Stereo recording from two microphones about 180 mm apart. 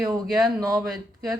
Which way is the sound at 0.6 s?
20° right (ahead or behind).